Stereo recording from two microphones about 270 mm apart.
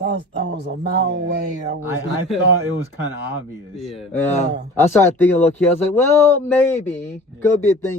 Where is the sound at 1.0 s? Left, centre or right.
Right.